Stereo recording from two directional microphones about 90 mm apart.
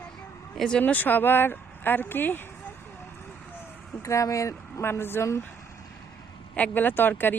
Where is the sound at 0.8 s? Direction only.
20° left (ahead or behind).